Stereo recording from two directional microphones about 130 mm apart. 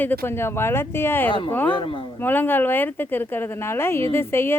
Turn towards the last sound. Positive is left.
turn(degrees=20)  # may be behind; listen again after turning